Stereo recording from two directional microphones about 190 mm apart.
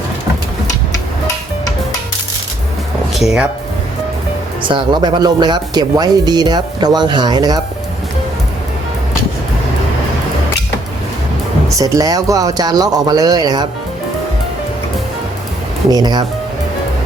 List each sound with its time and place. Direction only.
3.2 s speech: 5° right (ahead or behind)
4.7 s speech: 20° right (ahead or behind)
11.8 s speech: 15° right (ahead or behind)
15.9 s speech: 20° right (ahead or behind)